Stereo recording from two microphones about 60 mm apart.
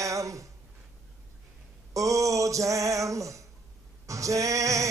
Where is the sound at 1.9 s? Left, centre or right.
Right.